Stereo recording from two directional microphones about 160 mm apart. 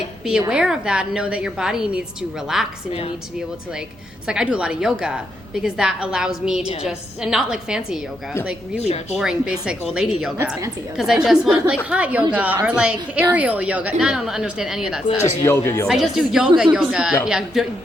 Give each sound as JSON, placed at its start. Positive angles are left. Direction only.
{"t": 0.3, "sound": "a woman's voice", "side_deg": -5}
{"t": 4.3, "sound": "a woman's voice", "side_deg": -5}
{"t": 8.8, "sound": "speech", "side_deg": 40}
{"t": 9.1, "sound": "a woman's voice", "side_deg": -5}
{"t": 15.4, "sound": "speech", "side_deg": 15}
{"t": 15.9, "sound": "a woman's voice", "side_deg": 0}